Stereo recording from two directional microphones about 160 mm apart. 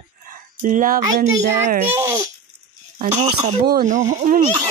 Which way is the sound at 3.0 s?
45° right (ahead or behind).